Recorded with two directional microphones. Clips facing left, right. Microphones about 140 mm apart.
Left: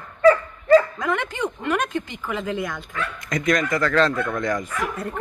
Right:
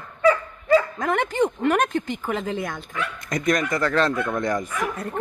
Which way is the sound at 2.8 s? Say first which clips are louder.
Even; 10° right (ahead or behind).